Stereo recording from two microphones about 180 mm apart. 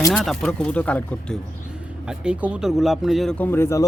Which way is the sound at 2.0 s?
5° right (ahead or behind).